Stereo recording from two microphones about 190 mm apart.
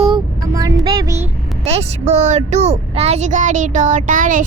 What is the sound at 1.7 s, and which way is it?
Speech, 35° right (ahead or behind).